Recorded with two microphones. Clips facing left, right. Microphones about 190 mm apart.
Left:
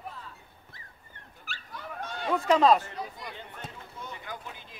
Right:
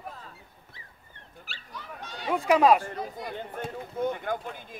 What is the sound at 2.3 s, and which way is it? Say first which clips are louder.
Speech: right 1 dB; 10° right (ahead or behind).